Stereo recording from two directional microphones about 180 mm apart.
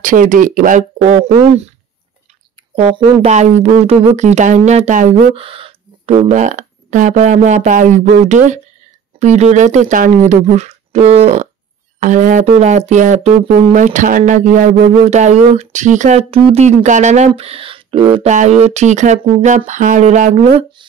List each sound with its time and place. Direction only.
0.0 s speech: 50° right (ahead or behind); by 1.7 s 30° right (ahead or behind)
2.7 s speech: 30° right (ahead or behind)
5.3 s speech: 30° right (ahead or behind)
18.3 s speech: 40° right (ahead or behind)